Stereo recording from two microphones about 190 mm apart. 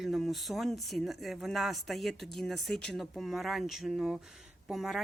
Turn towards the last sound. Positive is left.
turn(degrees=0)  # may be behind; listen again after turning